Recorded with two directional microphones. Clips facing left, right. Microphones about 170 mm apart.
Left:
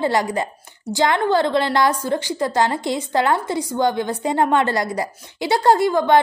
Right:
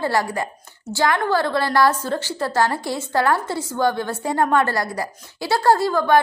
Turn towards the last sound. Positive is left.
turn(degrees=20)  # may be behind; listen again after turning